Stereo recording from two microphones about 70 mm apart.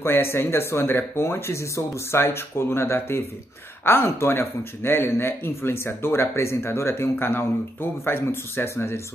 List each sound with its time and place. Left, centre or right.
0.0 s speech: left